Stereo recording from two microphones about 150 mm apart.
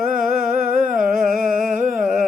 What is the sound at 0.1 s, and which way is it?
Humming, 65° right (ahead or behind).